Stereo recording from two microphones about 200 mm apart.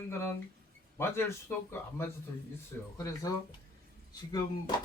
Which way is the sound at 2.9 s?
15° left (ahead or behind).